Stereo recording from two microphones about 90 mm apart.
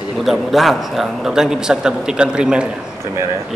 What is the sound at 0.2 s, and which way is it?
Speech, centre (ahead or behind).